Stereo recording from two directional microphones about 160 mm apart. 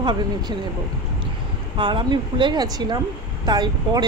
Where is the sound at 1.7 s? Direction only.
30° right (ahead or behind).